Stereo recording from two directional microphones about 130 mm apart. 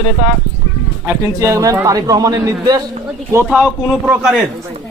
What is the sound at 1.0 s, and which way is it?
A man's voice, 20° right (ahead or behind).